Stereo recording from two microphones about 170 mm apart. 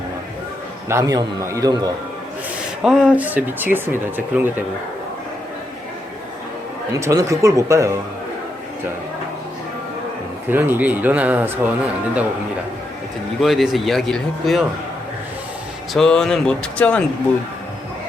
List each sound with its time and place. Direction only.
0.9 s speech: 20° right (ahead or behind)
2.8 s speech: 5° right (ahead or behind)
6.9 s speech: 20° right (ahead or behind)
10.5 s speech: 10° right (ahead or behind)
13.4 s speech: centre (ahead or behind)
15.9 s speech: 5° left (ahead or behind)